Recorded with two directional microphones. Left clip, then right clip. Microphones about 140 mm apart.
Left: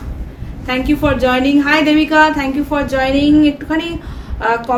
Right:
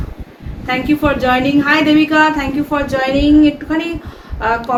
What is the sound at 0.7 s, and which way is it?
A woman's voice, 35° left (ahead or behind).